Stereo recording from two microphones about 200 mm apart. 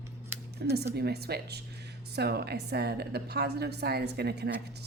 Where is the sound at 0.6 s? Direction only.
55° right (ahead or behind).